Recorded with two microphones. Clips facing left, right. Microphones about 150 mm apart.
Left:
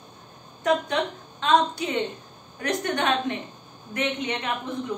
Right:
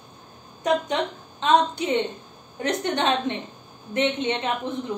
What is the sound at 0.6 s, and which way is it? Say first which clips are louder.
A woman's voice: even; 20° right (ahead or behind).